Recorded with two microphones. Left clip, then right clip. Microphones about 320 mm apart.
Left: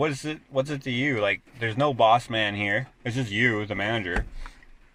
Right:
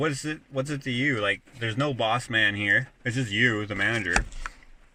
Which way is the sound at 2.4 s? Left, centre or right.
Left.